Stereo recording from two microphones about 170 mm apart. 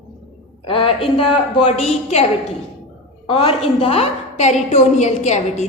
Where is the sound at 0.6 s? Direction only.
35° left (ahead or behind).